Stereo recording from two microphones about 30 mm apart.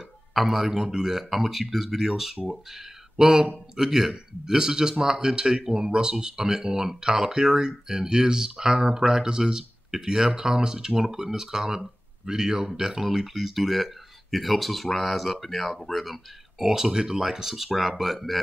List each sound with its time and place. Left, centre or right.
0.3 s a man's voice: centre
0.7 s speech: centre
1.3 s a man's voice: centre
16.9 s a man's voice: right
17.2 s speech: centre
17.7 s speech: centre